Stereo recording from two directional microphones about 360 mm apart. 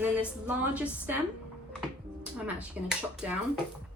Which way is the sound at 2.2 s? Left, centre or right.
Centre.